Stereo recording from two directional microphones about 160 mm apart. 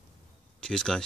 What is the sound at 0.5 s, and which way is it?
Speech, 5° left (ahead or behind).